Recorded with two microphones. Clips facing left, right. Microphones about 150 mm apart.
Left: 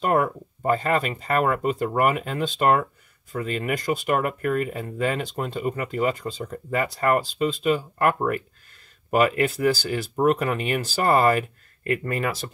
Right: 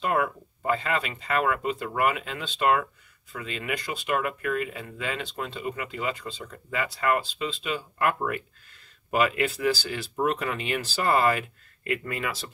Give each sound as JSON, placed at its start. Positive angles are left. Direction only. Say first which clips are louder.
{"t": 0.0, "sound": "speech", "louder": "left 4 dB", "side_deg": 40}